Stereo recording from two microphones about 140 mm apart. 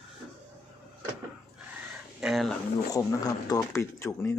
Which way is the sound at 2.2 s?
Centre (ahead or behind).